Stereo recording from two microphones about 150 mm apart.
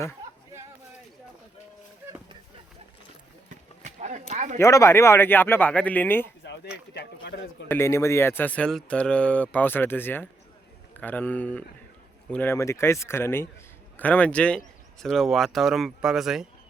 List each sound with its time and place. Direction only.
3.8 s speech: 50° right (ahead or behind)
4.5 s speech: 20° left (ahead or behind)
6.9 s speech: 90° left
7.7 s speech: 20° left (ahead or behind); by 16.5 s 5° right (ahead or behind)